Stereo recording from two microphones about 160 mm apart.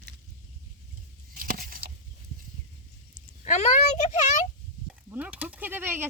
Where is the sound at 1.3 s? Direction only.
60° right (ahead or behind).